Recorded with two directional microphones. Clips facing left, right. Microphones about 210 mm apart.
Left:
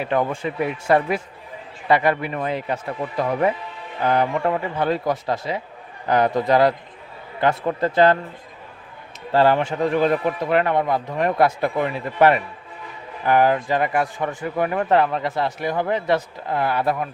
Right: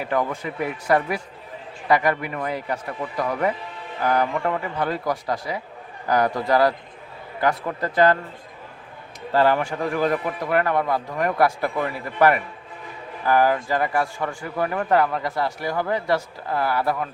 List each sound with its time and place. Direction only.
0.1 s speech: 25° left (ahead or behind)
9.3 s speech: 30° left (ahead or behind)